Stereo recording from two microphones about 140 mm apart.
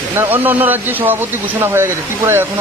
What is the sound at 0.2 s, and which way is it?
A man's voice, 15° right (ahead or behind).